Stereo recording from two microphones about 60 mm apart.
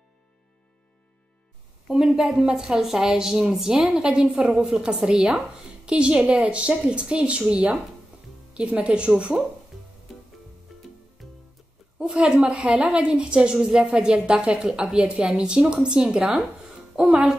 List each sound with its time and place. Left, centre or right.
1.9 s a woman's voice: centre
10.7 s music: centre
12.0 s a woman's voice: centre